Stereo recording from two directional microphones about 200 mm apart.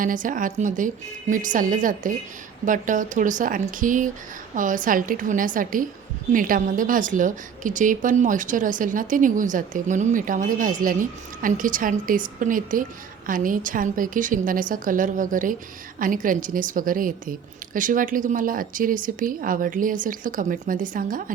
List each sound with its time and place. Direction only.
0.0 s a woman's voice: 40° right (ahead or behind)